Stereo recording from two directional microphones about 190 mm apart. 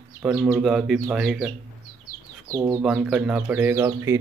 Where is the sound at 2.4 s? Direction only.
20° right (ahead or behind).